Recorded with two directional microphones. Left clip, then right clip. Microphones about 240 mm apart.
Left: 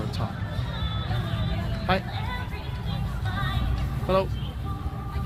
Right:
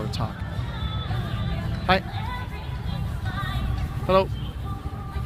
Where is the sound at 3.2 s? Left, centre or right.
Left.